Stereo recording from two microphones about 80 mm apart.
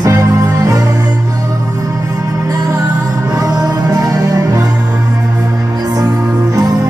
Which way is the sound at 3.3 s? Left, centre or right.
Right.